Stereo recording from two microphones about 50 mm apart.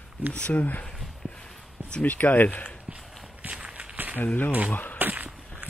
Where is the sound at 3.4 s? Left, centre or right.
Right.